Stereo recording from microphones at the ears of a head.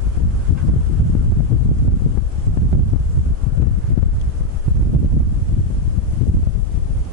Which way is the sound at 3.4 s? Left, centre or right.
Left.